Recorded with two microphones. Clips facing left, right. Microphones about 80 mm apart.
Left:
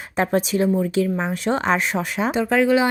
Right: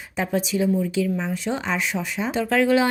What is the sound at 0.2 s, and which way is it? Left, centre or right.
Speech, left.